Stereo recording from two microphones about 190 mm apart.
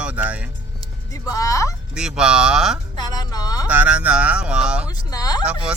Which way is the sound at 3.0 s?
20° left (ahead or behind).